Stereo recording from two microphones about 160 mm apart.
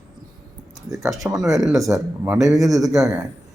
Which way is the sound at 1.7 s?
20° right (ahead or behind).